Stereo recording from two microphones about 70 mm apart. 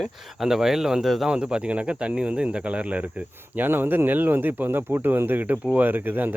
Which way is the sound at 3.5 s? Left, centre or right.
Right.